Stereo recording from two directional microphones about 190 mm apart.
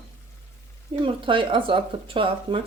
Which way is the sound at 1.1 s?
25° right (ahead or behind).